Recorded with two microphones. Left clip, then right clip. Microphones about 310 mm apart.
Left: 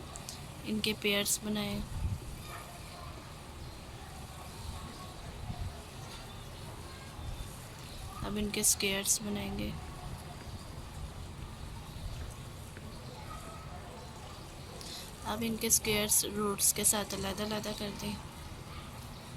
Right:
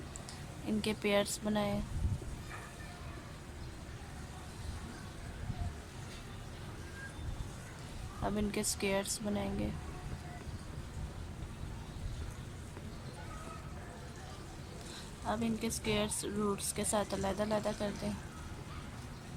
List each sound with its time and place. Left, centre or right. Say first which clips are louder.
0.8 s a woman's voice: left 1 dB; centre
8.2 s a woman's voice: left 1 dB; centre
15.3 s a woman's voice: left 3 dB; centre